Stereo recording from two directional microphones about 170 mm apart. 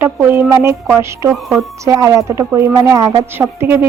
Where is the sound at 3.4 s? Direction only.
15° right (ahead or behind).